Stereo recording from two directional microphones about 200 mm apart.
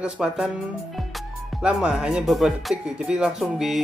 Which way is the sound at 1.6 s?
5° right (ahead or behind).